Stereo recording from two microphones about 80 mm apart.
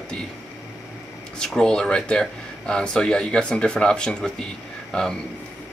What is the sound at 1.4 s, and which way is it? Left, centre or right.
Speech, centre.